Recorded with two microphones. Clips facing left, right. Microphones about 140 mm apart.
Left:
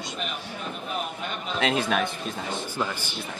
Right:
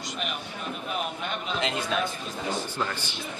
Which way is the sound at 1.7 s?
65° left (ahead or behind).